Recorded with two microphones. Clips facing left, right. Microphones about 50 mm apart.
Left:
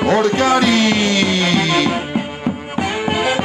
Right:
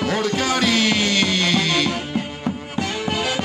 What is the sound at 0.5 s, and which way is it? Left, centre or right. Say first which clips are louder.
Music: left 5 dB; centre.